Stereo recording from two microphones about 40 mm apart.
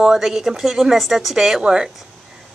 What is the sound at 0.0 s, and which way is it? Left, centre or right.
A woman's voice, centre.